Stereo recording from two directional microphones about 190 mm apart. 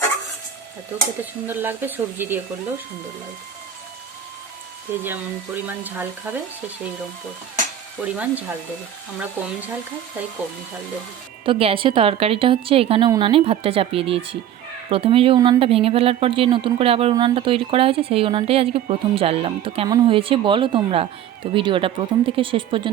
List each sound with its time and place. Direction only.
1.5 s speech: 10° right (ahead or behind)
4.9 s speech: 10° right (ahead or behind)
8.0 s speech: 10° right (ahead or behind)
11.4 s speech: 25° right (ahead or behind)